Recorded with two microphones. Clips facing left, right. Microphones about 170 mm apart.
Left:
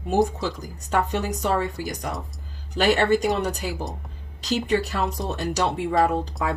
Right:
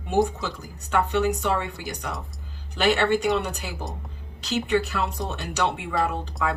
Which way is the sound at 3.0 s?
40° left (ahead or behind).